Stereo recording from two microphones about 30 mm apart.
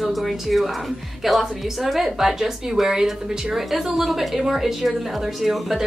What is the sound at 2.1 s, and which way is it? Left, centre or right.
A woman's voice, centre.